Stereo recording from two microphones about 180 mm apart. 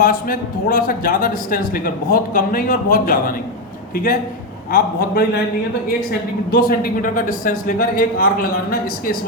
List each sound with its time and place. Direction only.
0.0 s a man's voice: 50° left (ahead or behind)
6.5 s a man's voice: 55° left (ahead or behind)